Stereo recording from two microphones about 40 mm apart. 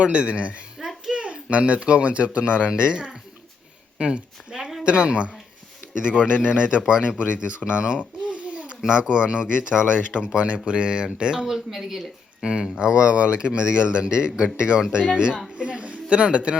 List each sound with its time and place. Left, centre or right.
0.0 s a man's voice: right
0.8 s a sound: centre
1.1 s a man's voice: right
7.8 s babbling: right
8.9 s a man's voice: right
11.4 s a man's voice: centre; by 15.4 s right
15.5 s a sound: right